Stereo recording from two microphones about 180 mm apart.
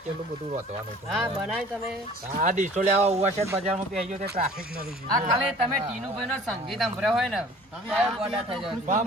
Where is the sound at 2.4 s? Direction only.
45° right (ahead or behind).